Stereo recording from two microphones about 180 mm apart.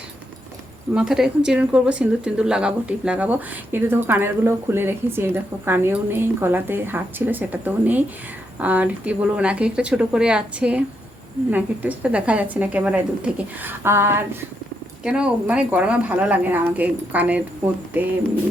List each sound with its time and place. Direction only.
0.9 s speech: 5° right (ahead or behind)